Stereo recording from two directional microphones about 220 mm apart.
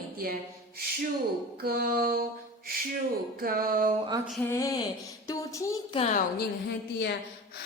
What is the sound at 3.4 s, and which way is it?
Music, 40° right (ahead or behind).